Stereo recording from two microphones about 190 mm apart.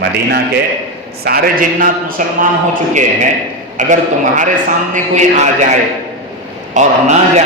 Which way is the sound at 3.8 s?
40° right (ahead or behind).